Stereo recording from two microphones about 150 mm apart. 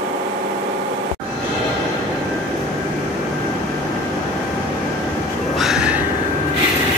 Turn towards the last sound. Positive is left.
turn(degrees=-5)  # may be behind; listen again after turning